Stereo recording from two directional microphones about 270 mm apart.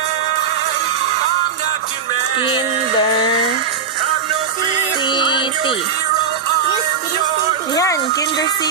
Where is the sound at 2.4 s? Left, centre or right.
Centre.